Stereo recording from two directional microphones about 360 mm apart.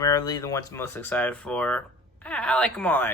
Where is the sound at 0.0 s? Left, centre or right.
Centre.